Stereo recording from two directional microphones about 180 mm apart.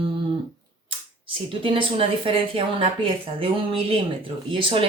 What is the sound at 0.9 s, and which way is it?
Speech, 30° right (ahead or behind).